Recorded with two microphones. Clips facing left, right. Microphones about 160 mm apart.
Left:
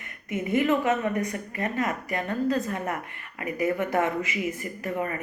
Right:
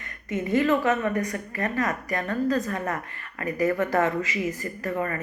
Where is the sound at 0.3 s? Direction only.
30° right (ahead or behind).